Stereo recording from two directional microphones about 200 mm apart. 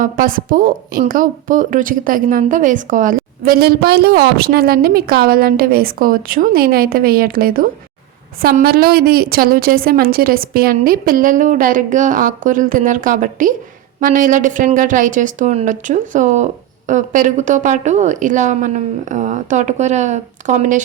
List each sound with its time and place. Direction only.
0.0 s a woman's voice: 45° right (ahead or behind)